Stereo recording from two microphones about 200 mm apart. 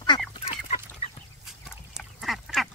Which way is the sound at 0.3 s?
30° left (ahead or behind).